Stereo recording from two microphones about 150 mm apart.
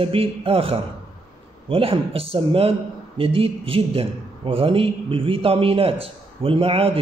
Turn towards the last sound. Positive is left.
turn(degrees=-40)  # may be behind; listen again after turning